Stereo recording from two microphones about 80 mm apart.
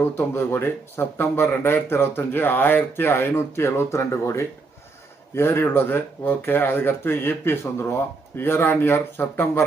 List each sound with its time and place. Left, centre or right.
0.2 s speech: left